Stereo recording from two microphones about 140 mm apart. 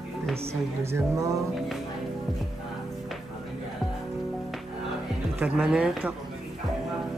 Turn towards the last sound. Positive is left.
turn(degrees=-5)  # may be behind; listen again after turning